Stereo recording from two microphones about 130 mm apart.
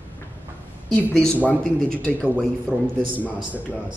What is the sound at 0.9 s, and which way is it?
A woman's voice, 10° left (ahead or behind).